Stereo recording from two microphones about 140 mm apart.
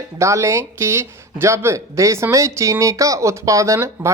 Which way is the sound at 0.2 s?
20° right (ahead or behind).